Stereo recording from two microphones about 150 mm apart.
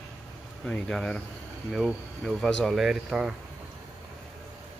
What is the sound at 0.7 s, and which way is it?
Speech, 5° left (ahead or behind).